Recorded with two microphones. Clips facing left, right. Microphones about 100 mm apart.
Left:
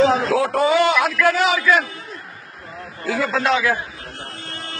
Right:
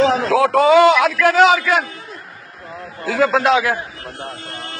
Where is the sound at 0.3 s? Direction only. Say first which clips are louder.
Right 5 dB; 90° right.